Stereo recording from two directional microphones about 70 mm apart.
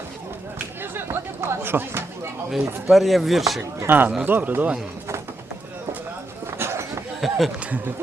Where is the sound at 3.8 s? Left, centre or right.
Right.